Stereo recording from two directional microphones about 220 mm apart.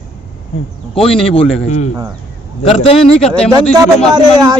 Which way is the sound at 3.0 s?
5° left (ahead or behind).